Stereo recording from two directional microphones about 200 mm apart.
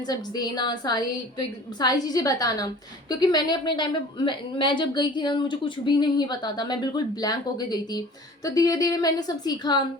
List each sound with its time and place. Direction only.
0.0 s a woman's voice: 20° left (ahead or behind)